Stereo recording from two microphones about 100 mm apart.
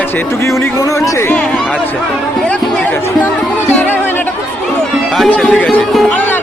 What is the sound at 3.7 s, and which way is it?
Music, 15° left (ahead or behind).